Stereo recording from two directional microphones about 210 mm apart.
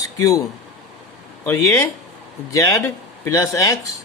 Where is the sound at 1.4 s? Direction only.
10° left (ahead or behind).